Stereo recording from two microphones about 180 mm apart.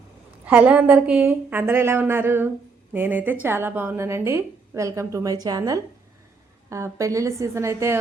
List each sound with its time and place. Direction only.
0.4 s a woman's voice: 10° right (ahead or behind)